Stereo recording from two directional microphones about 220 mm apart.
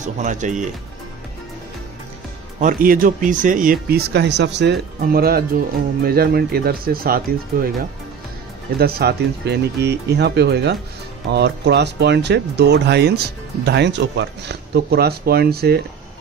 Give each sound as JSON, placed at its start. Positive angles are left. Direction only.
{"t": 0.0, "sound": "speech", "side_deg": -35}
{"t": 2.6, "sound": "speech", "side_deg": -40}
{"t": 8.7, "sound": "speech", "side_deg": -45}